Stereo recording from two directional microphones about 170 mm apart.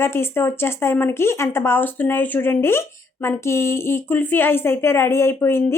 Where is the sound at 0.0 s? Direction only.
15° left (ahead or behind).